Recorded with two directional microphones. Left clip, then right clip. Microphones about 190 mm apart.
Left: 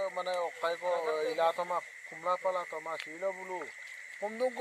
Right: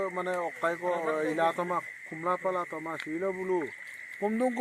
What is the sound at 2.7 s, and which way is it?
Speech, 25° right (ahead or behind).